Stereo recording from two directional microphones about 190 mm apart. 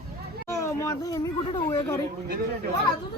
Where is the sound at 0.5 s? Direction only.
15° left (ahead or behind).